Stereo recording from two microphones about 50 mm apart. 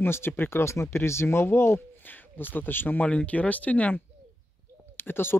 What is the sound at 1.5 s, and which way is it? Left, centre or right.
Speech, left.